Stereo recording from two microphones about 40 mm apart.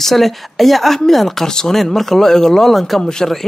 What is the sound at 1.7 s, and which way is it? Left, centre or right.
A man's voice, centre.